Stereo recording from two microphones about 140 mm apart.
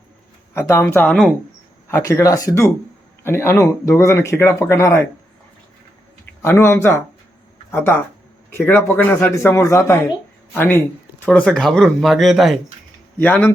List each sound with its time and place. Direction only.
0.5 s a man's voice: 15° left (ahead or behind)
2.0 s speech: 25° left (ahead or behind)
6.4 s a man's voice: 15° left (ahead or behind); by 12.5 s centre (ahead or behind)
13.1 s a man's voice: 10° left (ahead or behind)